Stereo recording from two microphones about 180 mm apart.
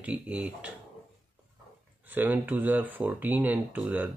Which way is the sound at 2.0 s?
10° right (ahead or behind).